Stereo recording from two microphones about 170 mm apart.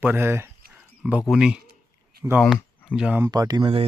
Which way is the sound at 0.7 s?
10° right (ahead or behind).